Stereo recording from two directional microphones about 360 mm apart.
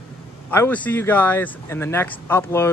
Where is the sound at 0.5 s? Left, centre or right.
Centre.